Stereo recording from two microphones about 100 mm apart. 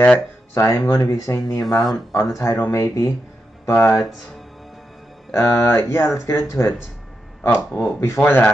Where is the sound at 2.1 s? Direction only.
30° left (ahead or behind).